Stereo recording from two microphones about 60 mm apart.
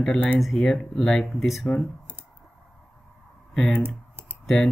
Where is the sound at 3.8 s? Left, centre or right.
Right.